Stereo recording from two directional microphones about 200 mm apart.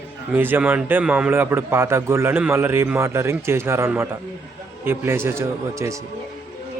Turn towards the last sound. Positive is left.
turn(degrees=-15)  # may be behind; listen again after turning